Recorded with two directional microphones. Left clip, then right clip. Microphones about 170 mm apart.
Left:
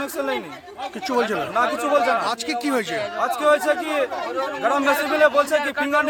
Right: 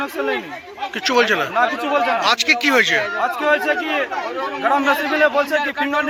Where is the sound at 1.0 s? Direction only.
15° left (ahead or behind).